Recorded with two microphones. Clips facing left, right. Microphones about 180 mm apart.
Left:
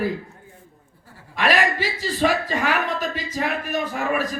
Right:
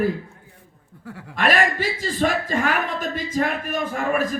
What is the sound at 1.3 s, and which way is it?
Speech, 50° right (ahead or behind).